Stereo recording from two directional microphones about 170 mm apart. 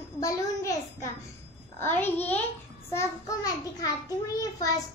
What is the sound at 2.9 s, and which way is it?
Child singing, 20° left (ahead or behind).